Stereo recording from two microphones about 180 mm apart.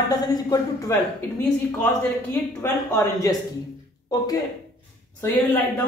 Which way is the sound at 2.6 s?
15° left (ahead or behind).